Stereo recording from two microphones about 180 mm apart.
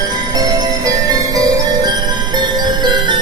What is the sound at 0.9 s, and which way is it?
Music, 20° right (ahead or behind).